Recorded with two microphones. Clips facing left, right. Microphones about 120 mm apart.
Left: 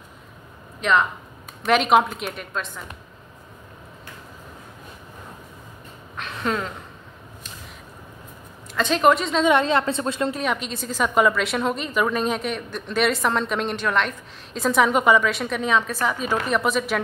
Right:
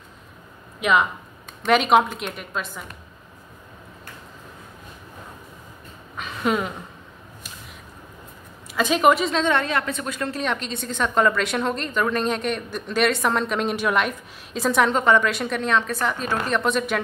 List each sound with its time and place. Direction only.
0.7 s a woman's voice: 10° right (ahead or behind)
6.1 s a sound: 5° right (ahead or behind)
8.7 s a woman's voice: 5° right (ahead or behind)
9.5 s a woman's voice: 20° left (ahead or behind)
10.3 s a woman's voice: 5° left (ahead or behind)